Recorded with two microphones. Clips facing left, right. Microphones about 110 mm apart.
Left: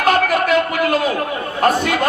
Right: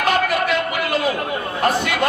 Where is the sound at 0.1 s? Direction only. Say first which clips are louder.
Left 5 dB; 45° left (ahead or behind).